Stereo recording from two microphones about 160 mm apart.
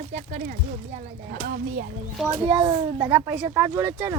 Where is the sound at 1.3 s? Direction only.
65° right (ahead or behind).